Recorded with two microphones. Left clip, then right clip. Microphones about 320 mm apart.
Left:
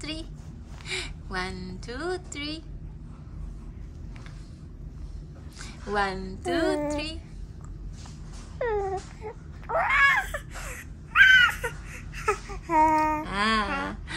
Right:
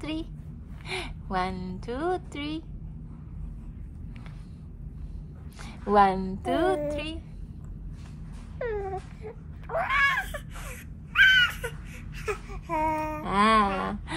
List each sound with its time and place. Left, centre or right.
0.0 s a woman's voice: centre
5.6 s a woman's voice: centre
8.5 s baby cry: centre
13.2 s a sound: centre